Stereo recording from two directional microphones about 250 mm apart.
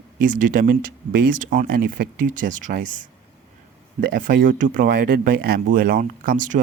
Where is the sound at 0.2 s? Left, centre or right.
Right.